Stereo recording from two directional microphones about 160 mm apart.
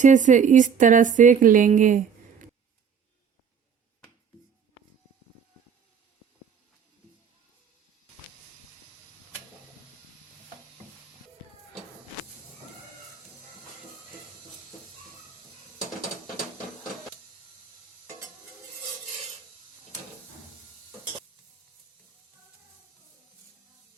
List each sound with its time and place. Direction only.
0.0 s a woman's voice: 50° right (ahead or behind)